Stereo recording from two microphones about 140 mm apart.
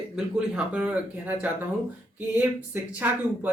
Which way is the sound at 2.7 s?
15° right (ahead or behind).